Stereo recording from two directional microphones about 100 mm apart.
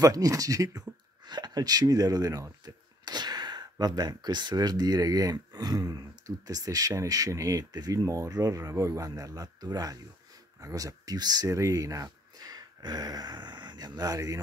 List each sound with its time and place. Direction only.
0.0 s speech: 35° right (ahead or behind)